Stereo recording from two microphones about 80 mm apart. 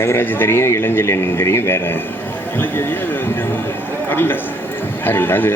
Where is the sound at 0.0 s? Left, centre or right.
Left.